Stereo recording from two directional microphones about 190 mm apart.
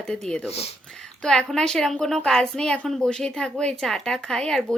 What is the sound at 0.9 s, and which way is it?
A woman's voice, 5° left (ahead or behind).